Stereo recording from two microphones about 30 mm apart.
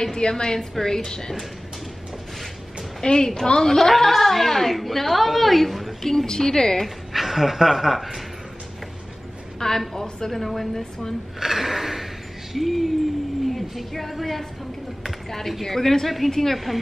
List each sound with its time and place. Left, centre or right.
0.2 s speech: left
3.0 s speech: left
3.6 s a woman's voice: centre
6.0 s speech: centre
7.1 s speech: centre
9.6 s a woman's voice: centre
11.3 s a sound: centre
12.5 s a woman's voice: centre
16.5 s a woman's voice: centre